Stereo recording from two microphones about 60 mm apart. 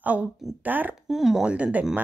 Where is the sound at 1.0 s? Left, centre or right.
Centre.